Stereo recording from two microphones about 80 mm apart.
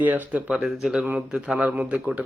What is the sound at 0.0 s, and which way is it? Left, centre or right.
Speech, right.